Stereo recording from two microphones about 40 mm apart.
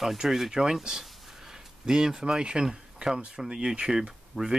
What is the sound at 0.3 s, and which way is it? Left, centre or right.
Speech, centre.